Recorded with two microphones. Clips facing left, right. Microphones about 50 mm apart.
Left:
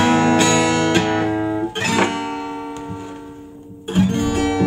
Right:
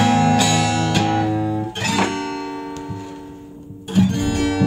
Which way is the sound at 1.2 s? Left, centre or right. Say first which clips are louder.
Left 1 dB; left.